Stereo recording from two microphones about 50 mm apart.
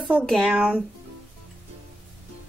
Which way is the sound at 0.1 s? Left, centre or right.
Right.